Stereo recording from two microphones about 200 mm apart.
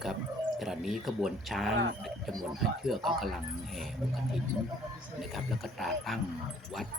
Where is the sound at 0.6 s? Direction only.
Centre (ahead or behind).